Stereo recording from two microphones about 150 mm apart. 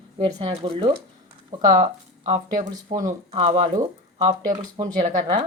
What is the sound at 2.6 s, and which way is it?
Speech, 60° right (ahead or behind).